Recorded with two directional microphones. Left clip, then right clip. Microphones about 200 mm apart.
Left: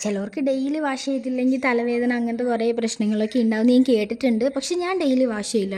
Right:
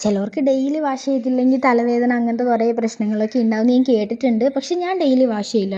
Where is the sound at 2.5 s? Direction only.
20° left (ahead or behind).